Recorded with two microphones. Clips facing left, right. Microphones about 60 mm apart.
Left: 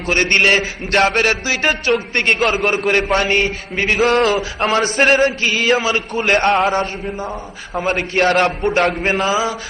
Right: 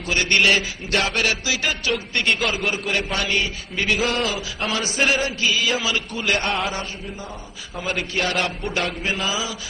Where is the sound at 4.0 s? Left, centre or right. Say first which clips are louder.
Left 9 dB; left.